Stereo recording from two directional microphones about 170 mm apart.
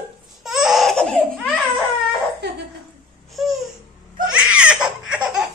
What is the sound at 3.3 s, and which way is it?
Babbling, centre (ahead or behind).